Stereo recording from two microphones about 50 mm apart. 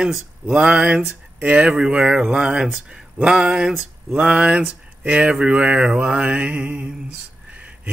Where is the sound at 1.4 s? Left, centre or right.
Right.